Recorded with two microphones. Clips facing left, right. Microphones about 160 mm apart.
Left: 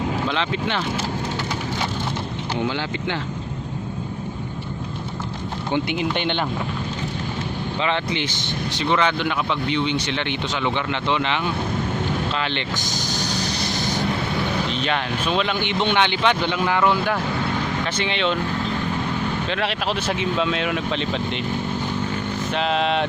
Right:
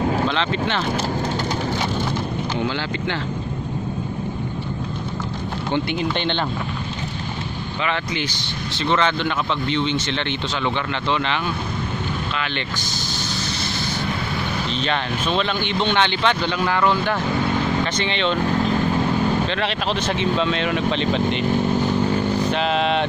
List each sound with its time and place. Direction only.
0.3 s speech: 10° left (ahead or behind)
2.6 s speech: 15° left (ahead or behind)
5.7 s speech: 15° left (ahead or behind)
7.8 s speech: 25° left (ahead or behind)
8.8 s speech: 10° left (ahead or behind)
12.3 s speech: 30° left (ahead or behind)
13.1 s vehicle: 40° left (ahead or behind)
13.7 s vehicle: 15° left (ahead or behind)
14.7 s speech: 5° left (ahead or behind)
19.5 s speech: 5° left (ahead or behind)
22.0 s vehicle: 35° right (ahead or behind)
22.5 s speech: centre (ahead or behind)